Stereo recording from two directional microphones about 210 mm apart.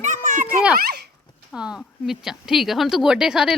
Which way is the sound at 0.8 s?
50° right (ahead or behind).